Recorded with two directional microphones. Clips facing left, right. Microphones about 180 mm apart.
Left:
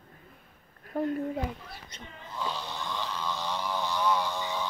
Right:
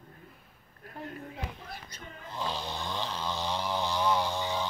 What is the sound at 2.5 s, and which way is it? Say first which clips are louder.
Snoring: right 1 dB; 30° right (ahead or behind).